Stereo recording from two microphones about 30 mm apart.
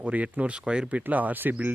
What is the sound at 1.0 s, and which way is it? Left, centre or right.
Speech, right.